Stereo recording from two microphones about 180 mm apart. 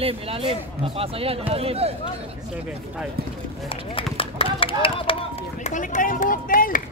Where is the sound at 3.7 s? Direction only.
30° left (ahead or behind).